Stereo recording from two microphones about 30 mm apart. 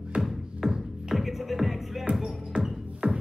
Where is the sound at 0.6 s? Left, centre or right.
Centre.